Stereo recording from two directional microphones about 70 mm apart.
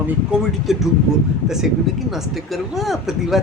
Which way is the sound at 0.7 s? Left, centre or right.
Centre.